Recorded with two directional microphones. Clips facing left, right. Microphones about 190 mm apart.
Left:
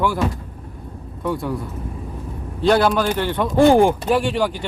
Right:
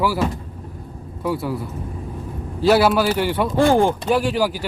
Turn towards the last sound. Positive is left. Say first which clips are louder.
# even
turn(degrees=-5)  # may be behind; listen again after turning